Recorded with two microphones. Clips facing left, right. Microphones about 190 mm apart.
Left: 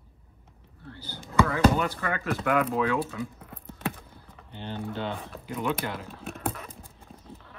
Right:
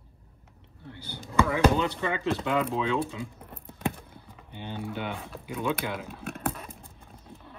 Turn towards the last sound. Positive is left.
turn(degrees=-15)  # may be behind; listen again after turning